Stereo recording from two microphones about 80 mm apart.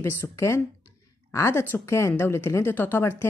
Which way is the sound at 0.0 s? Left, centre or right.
Left.